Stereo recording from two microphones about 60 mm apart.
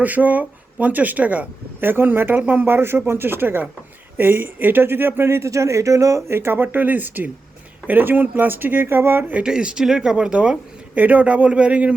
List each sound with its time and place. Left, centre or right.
0.0 s speech: right
5.5 s speech: right
6.3 s speech: right
9.4 s speech: centre